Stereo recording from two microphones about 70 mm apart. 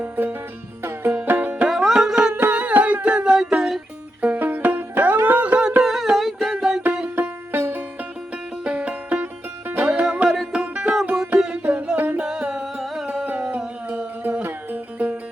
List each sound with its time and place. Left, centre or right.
0.0 s music: right
1.6 s music: centre
2.1 s music: centre
4.2 s music: right
5.8 s music: centre
7.2 s music: right
8.6 s music: centre
9.8 s music: centre
12.2 s music: centre
13.8 s a sound: right
14.4 s music: right